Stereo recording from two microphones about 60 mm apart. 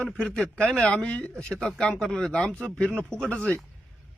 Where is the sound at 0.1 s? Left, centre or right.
Centre.